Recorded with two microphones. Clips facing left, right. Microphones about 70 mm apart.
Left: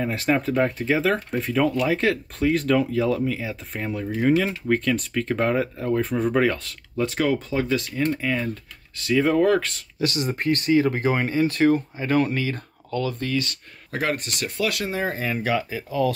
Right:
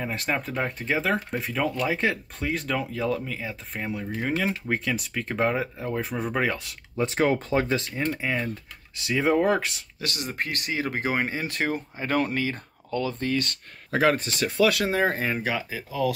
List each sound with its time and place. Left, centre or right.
0.0 s speech: centre
7.0 s speech: right
10.0 s speech: centre; by 13.3 s right
13.3 s speech: right
15.4 s speech: centre